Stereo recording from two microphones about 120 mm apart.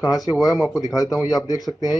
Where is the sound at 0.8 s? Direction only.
30° left (ahead or behind).